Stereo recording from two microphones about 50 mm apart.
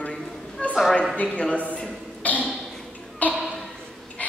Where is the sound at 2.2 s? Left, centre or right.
Left.